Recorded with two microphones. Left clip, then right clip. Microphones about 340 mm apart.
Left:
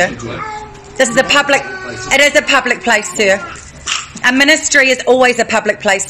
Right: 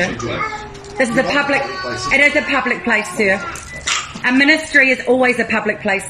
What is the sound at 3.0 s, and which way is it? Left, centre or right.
Speech, left.